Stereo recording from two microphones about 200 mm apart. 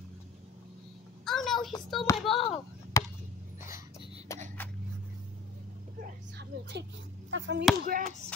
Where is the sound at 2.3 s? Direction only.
30° left (ahead or behind).